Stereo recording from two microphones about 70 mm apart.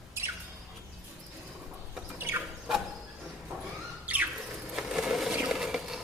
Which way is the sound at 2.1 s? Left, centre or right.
Right.